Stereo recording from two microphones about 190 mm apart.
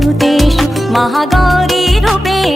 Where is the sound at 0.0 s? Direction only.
Centre (ahead or behind).